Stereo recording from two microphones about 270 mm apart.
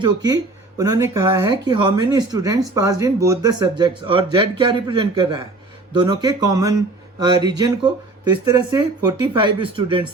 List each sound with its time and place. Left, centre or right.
0.0 s speech: centre